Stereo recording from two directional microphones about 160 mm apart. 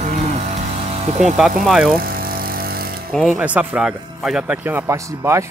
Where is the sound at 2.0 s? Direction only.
65° right (ahead or behind).